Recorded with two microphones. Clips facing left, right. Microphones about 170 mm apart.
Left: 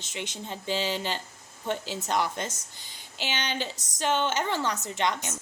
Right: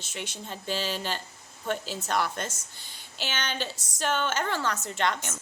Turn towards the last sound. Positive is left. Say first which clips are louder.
# even
turn(degrees=15)  # may be behind; listen again after turning